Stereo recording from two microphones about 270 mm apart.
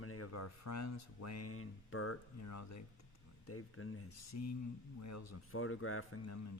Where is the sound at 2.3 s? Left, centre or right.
Left.